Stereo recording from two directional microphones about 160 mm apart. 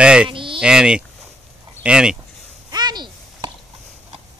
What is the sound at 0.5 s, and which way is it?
Speech, 5° right (ahead or behind).